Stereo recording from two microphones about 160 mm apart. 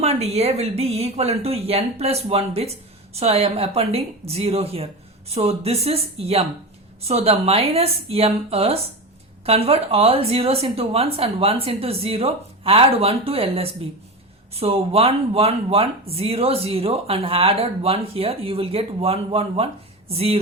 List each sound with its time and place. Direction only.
0.0 s speech: 40° right (ahead or behind)